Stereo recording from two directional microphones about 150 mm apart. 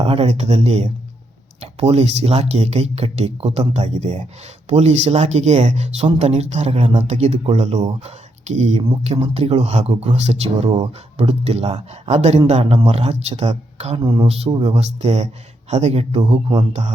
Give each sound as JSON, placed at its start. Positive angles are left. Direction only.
{"t": 0.0, "sound": "speech", "side_deg": -40}
{"t": 6.7, "sound": "a man's voice", "side_deg": -35}
{"t": 6.9, "sound": "a man's voice", "side_deg": -45}